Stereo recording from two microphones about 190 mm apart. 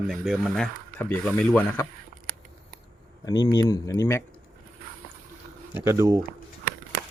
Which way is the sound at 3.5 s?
15° left (ahead or behind).